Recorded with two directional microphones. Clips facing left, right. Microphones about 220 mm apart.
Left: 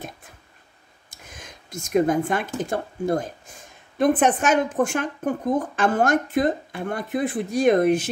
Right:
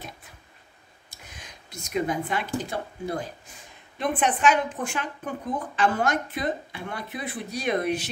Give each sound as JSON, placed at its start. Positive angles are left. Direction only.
{"t": 1.1, "sound": "a woman's voice", "side_deg": 45}